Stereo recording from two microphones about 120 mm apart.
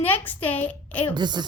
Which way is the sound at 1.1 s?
40° right (ahead or behind).